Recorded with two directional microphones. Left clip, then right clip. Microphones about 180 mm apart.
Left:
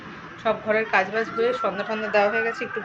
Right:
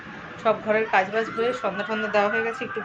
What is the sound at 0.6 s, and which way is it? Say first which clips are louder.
A woman's voice: left 2 dB; 5° right (ahead or behind).